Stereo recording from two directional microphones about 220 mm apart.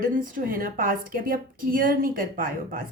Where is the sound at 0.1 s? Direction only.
40° right (ahead or behind).